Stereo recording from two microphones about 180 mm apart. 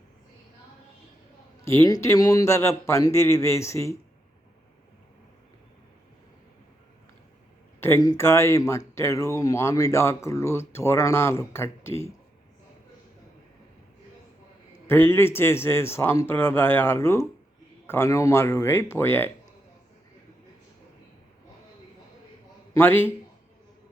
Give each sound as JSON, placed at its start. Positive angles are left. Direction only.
{"t": 1.6, "sound": "speech", "side_deg": 15}
{"t": 7.8, "sound": "speech", "side_deg": 15}
{"t": 14.8, "sound": "speech", "side_deg": 15}
{"t": 22.7, "sound": "speech", "side_deg": 10}